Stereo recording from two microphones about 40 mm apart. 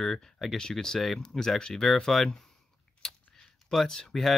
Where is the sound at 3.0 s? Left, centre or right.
Centre.